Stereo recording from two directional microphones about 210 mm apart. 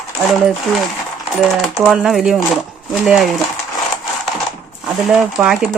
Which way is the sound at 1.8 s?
Centre (ahead or behind).